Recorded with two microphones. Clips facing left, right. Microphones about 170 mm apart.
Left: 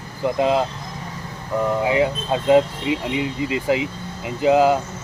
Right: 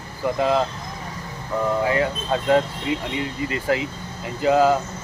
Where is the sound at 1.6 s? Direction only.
15° left (ahead or behind).